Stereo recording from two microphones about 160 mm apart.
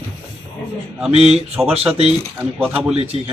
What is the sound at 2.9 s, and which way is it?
Speech, 40° right (ahead or behind).